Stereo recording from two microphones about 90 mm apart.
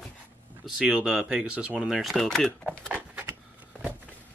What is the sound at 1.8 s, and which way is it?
Speech, centre (ahead or behind).